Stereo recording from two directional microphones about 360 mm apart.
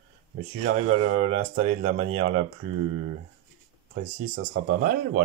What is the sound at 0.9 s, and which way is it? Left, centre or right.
Speech, centre.